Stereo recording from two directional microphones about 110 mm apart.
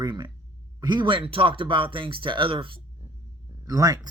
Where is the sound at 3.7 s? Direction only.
30° right (ahead or behind).